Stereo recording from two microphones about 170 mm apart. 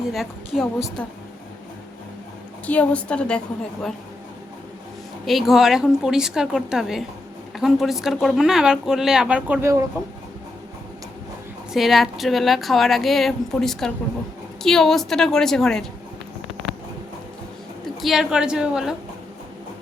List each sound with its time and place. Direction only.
0.1 s speech: centre (ahead or behind)
2.6 s a woman's voice: 10° left (ahead or behind)
5.2 s speech: centre (ahead or behind)
11.7 s speech: centre (ahead or behind)
18.0 s speech: centre (ahead or behind)